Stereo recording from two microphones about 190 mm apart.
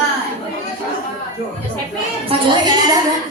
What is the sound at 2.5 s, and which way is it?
Speech, 20° right (ahead or behind).